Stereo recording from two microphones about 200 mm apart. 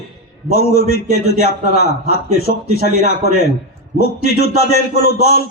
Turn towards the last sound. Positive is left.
turn(degrees=55)  # may be behind; listen again after turning